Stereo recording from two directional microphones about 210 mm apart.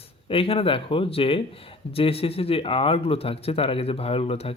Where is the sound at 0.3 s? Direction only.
25° left (ahead or behind).